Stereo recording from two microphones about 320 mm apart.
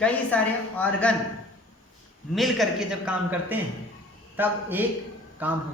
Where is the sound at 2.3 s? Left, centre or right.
Centre.